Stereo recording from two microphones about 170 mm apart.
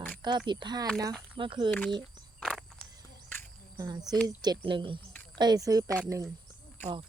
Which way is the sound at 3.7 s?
25° right (ahead or behind).